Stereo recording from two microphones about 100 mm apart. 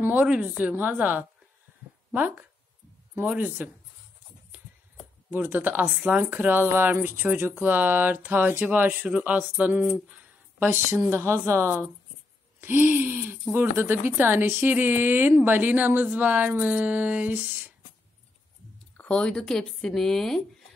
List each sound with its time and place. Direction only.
0.0 s a woman's voice: 15° right (ahead or behind)
5.3 s speech: 20° right (ahead or behind)
18.9 s speech: 10° left (ahead or behind)